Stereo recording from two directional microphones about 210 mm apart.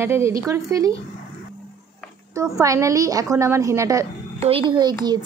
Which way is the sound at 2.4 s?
15° right (ahead or behind).